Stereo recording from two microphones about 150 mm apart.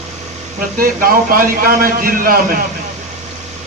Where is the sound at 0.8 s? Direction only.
75° right (ahead or behind).